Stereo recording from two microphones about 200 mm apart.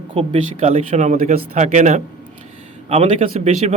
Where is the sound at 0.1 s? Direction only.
30° right (ahead or behind).